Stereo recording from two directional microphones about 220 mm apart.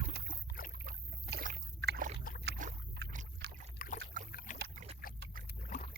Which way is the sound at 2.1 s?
40° left (ahead or behind).